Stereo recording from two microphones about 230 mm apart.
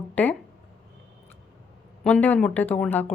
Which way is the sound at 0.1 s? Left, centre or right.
Centre.